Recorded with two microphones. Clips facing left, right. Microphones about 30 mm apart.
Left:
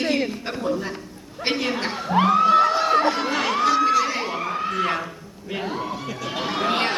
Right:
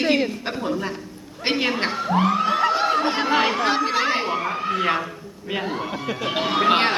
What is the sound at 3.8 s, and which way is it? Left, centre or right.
Crowd, right.